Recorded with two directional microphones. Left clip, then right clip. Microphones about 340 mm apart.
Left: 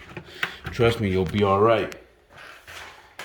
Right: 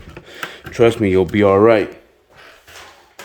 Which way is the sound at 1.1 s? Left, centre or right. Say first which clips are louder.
Right 9 dB; right.